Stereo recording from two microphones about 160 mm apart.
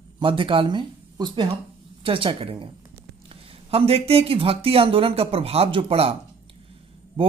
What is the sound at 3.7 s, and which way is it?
Speech, 35° right (ahead or behind).